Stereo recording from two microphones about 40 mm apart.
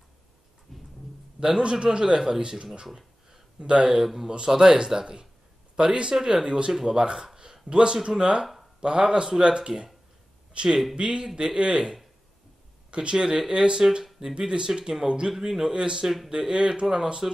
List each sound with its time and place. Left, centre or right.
0.7 s thunder: centre
1.4 s a man's voice: right
3.3 s a sound: centre
3.9 s a man's voice: centre; by 11.9 s right
12.9 s a man's voice: right
15.7 s a man's voice: right